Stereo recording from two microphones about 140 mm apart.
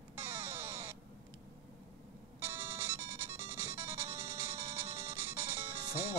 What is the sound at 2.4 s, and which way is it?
Music, 15° right (ahead or behind).